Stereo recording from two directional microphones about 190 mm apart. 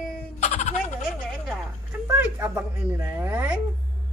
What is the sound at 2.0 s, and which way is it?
A child's voice, 10° right (ahead or behind).